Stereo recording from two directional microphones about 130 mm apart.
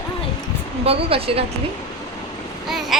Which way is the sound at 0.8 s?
50° right (ahead or behind).